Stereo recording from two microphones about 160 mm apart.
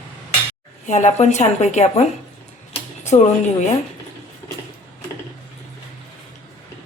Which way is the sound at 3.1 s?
40° left (ahead or behind).